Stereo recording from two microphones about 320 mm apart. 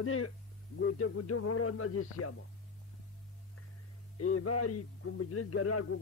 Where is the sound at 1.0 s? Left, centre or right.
Left.